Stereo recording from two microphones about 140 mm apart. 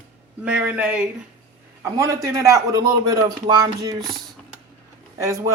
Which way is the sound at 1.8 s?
20° right (ahead or behind).